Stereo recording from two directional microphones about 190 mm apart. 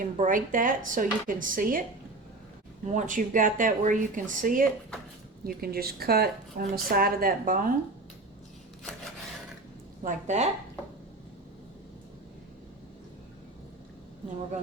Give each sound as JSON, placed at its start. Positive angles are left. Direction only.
{"t": 0.0, "sound": "speech", "side_deg": -45}
{"t": 2.8, "sound": "speech", "side_deg": -40}
{"t": 10.0, "sound": "speech", "side_deg": -40}